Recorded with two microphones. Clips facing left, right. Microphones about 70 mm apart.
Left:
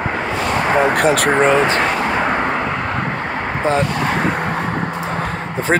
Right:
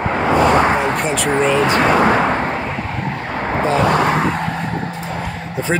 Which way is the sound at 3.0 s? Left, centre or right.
Left.